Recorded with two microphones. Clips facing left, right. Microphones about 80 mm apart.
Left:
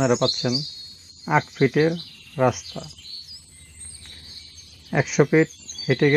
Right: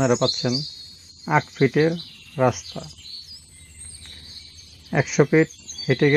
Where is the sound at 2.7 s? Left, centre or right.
Left.